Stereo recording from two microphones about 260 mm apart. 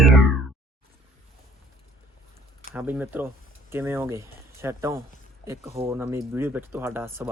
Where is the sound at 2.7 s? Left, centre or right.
Centre.